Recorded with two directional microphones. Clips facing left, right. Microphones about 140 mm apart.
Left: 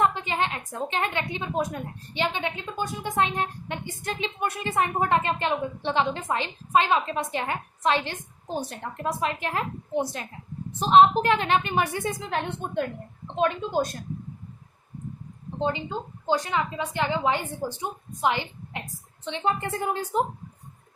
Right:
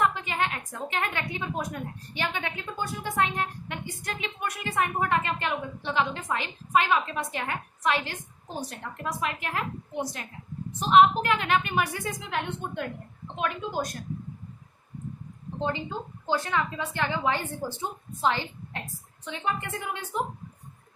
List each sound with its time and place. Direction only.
0.0 s a woman's voice: 25° left (ahead or behind)
15.5 s a woman's voice: 20° left (ahead or behind)
19.2 s a woman's voice: 30° left (ahead or behind)